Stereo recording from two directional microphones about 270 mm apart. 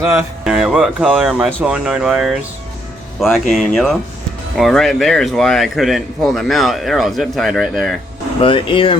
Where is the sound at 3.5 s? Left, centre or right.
Centre.